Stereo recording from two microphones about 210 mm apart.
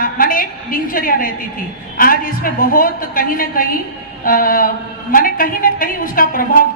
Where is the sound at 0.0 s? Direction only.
40° left (ahead or behind).